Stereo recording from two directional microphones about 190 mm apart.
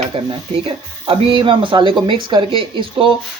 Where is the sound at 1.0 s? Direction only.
25° right (ahead or behind).